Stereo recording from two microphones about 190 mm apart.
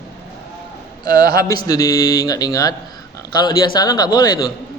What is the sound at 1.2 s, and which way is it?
Speech, 50° right (ahead or behind).